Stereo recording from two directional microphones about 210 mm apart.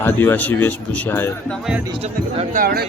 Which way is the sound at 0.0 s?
10° left (ahead or behind).